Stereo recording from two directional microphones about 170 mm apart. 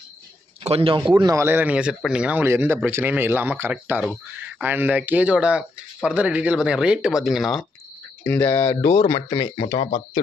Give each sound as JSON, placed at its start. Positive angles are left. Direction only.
{"t": 0.7, "sound": "a man's voice", "side_deg": -35}
{"t": 1.1, "sound": "speech", "side_deg": -20}
{"t": 8.2, "sound": "speech", "side_deg": 15}
{"t": 9.3, "sound": "speech", "side_deg": 25}